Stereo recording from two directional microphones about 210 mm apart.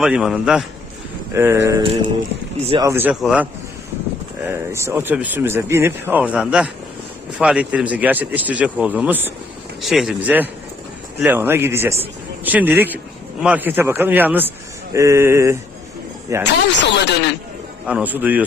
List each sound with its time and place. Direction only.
0.0 s speech: centre (ahead or behind)
1.8 s a sound: 25° right (ahead or behind)
2.8 s speech: 10° right (ahead or behind)
16.5 s speech: 55° left (ahead or behind)
17.8 s speech: 5° right (ahead or behind)